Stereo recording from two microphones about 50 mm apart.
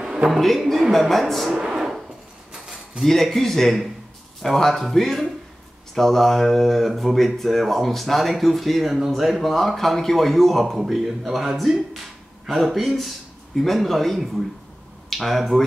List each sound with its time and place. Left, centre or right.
0.0 s a sound: centre
0.3 s speech: centre
1.5 s speech: right
1.8 s hammer: centre
3.0 s speech: centre